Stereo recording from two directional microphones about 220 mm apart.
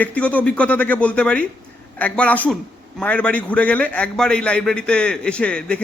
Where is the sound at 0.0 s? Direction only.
5° left (ahead or behind).